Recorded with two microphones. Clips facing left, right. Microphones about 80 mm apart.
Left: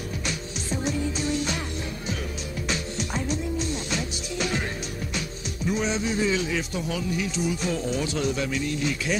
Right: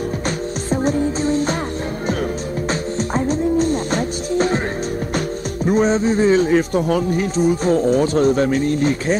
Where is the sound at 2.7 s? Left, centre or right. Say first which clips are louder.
Right 8 dB; right.